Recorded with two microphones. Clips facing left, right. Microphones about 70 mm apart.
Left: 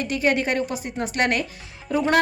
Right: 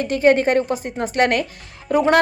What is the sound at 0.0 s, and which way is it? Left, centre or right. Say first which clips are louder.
A woman's voice: right 7 dB; right.